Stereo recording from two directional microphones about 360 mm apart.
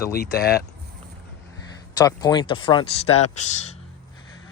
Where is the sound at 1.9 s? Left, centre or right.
Centre.